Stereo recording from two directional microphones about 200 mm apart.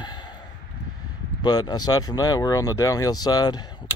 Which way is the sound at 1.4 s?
20° left (ahead or behind).